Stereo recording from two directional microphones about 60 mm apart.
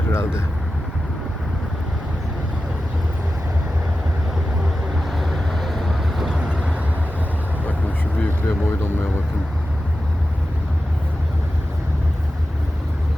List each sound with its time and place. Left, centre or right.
0.1 s speech: left
5.1 s vehicle: centre
6.4 s vehicle: centre
8.2 s a sound: left